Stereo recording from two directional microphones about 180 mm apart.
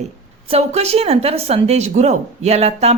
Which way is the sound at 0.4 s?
35° right (ahead or behind).